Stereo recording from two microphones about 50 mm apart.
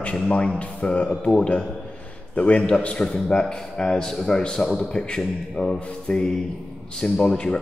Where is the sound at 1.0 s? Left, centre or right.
Centre.